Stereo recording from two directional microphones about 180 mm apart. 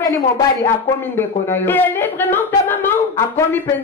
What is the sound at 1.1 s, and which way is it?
Speech, 10° left (ahead or behind).